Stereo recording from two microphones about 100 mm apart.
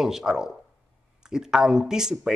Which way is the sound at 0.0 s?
5° right (ahead or behind).